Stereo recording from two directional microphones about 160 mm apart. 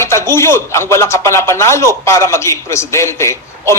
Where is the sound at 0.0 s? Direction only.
15° left (ahead or behind).